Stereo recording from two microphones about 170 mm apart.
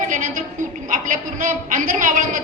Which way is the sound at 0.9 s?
50° right (ahead or behind).